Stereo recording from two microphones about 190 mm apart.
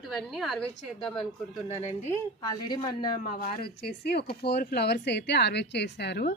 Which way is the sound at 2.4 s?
20° left (ahead or behind).